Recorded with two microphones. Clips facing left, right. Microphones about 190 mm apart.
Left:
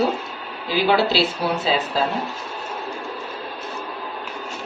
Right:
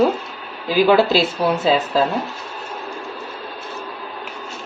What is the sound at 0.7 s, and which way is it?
Speech, 45° right (ahead or behind).